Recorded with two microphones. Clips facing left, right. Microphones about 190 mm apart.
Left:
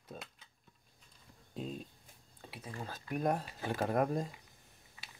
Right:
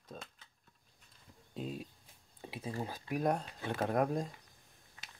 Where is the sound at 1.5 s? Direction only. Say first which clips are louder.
Right 1 dB; 5° right (ahead or behind).